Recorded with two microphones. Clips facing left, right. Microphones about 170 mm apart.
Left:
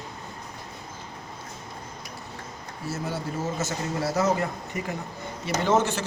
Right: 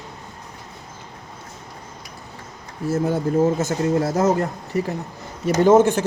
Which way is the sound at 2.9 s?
55° right (ahead or behind).